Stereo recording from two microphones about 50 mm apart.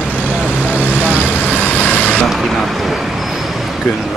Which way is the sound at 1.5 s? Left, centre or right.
Left.